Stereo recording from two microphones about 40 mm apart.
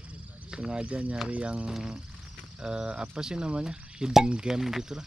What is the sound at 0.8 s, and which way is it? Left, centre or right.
Speech, right.